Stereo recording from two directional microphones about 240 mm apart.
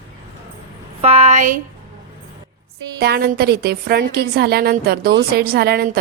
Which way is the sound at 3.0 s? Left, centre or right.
Right.